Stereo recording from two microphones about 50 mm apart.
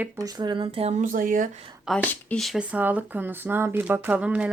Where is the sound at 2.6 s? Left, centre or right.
Right.